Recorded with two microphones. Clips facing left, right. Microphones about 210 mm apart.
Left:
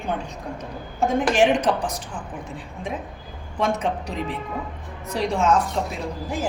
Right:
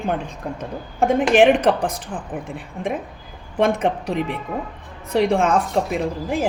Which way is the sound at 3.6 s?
55° right (ahead or behind).